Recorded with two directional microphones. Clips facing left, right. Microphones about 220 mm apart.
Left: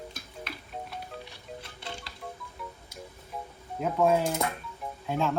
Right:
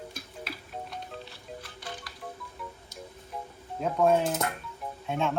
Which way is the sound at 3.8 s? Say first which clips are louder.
Even; centre (ahead or behind).